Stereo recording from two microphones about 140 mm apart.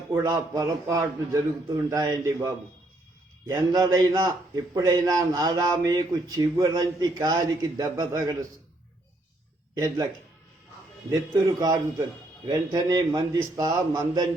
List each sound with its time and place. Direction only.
0.2 s a man's voice: 30° right (ahead or behind)
11.4 s a man's voice: 25° right (ahead or behind)